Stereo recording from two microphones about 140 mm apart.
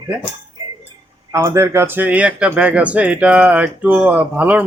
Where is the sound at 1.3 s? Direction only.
20° right (ahead or behind).